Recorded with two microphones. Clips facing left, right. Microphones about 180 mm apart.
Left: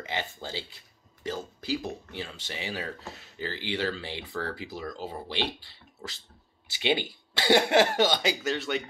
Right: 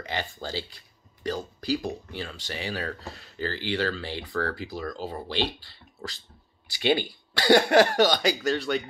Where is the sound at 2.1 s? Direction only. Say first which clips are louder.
Right 3 dB; 25° left (ahead or behind).